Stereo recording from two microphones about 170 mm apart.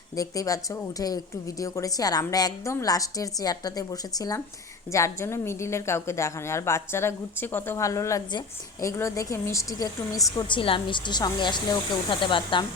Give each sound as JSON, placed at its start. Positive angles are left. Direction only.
{"t": 0.2, "sound": "a woman's voice", "side_deg": 20}